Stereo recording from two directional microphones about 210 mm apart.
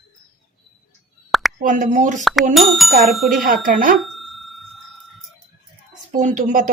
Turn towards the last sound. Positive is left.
turn(degrees=-40)  # may be behind; listen again after turning